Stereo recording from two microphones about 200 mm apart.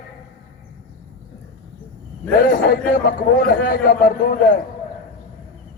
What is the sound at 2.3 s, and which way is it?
A man's voice, 45° left (ahead or behind).